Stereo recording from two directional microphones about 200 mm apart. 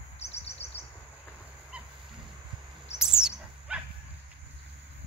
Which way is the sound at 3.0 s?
5° right (ahead or behind).